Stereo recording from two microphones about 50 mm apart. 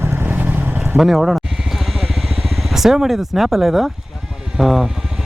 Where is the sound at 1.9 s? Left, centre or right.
Centre.